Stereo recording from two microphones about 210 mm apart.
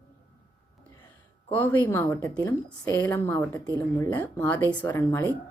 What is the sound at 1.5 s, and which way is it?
A woman's voice, 10° left (ahead or behind).